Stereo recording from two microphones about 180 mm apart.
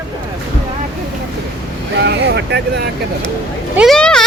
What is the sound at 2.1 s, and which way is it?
Vehicle, 70° right (ahead or behind).